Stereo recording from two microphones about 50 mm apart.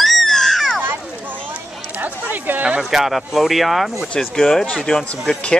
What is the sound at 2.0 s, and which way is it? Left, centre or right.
Speech, right.